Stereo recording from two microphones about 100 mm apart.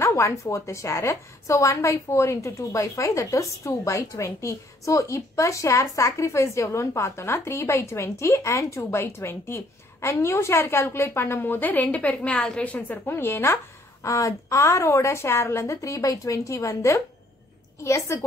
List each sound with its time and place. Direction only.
0.0 s a woman's voice: 30° left (ahead or behind)